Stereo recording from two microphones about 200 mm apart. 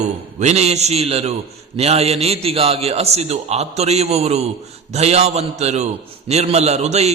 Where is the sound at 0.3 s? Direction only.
35° right (ahead or behind).